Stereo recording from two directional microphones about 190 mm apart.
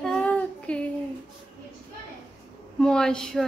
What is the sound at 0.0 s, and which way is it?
Child singing, 5° left (ahead or behind).